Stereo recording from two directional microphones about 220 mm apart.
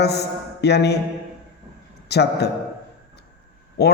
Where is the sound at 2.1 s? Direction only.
50° left (ahead or behind).